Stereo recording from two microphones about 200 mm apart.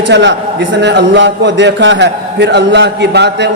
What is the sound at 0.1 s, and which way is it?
Speech, 60° right (ahead or behind).